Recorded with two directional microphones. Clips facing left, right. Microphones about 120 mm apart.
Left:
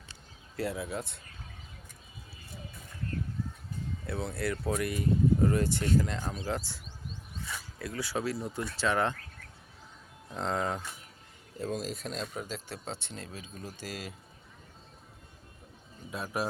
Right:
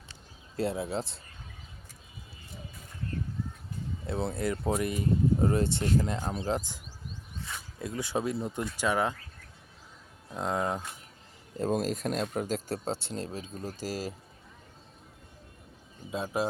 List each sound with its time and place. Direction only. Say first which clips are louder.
0.5 s speech: right 3 dB; 25° right (ahead or behind)
4.0 s speech: right 3 dB; 25° right (ahead or behind)
7.8 s speech: right 3 dB; 20° right (ahead or behind)
10.2 s speech: right 1 dB; 10° right (ahead or behind)
11.5 s speech: right 6 dB; 45° right (ahead or behind)
16.1 s speech: right 3 dB; 20° right (ahead or behind)